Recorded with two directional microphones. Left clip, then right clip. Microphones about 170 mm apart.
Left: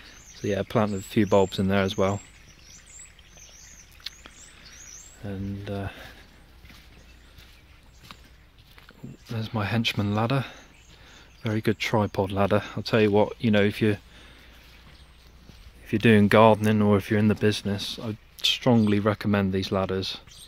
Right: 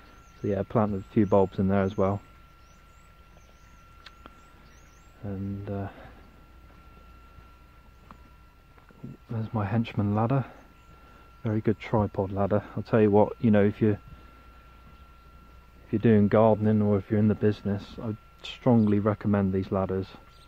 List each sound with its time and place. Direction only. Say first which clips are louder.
0.4 s speech: left 2 dB; 5° left (ahead or behind)
5.2 s speech: left 1 dB; 10° left (ahead or behind)
9.3 s speech: left 2 dB; 10° left (ahead or behind)
12.8 s speech: right 1 dB; centre (ahead or behind)
15.9 s speech: left 3 dB; 15° left (ahead or behind)
17.5 s speech: left 3 dB; 10° left (ahead or behind)